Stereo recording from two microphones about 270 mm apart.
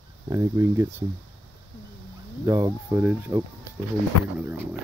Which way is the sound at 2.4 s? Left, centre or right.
Centre.